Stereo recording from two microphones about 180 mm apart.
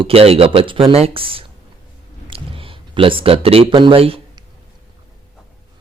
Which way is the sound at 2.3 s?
30° right (ahead or behind).